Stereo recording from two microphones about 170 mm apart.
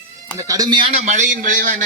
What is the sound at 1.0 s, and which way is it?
Speech, 45° right (ahead or behind).